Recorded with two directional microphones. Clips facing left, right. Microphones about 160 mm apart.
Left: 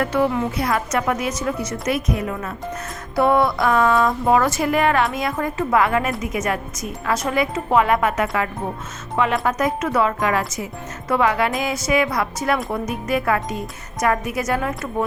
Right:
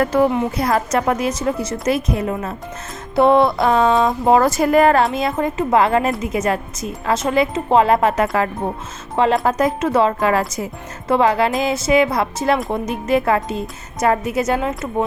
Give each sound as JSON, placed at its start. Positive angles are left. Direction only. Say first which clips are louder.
{"t": 0.0, "sound": "a woman's voice", "louder": "right 4 dB", "side_deg": -40}
{"t": 4.4, "sound": "a woman's voice", "louder": "right 5 dB", "side_deg": -35}
{"t": 5.0, "sound": "a woman's voice", "louder": "right 4 dB", "side_deg": -25}